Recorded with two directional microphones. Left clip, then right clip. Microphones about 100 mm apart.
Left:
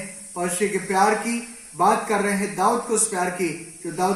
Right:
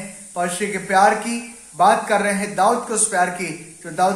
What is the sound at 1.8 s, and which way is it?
Speech, 5° right (ahead or behind).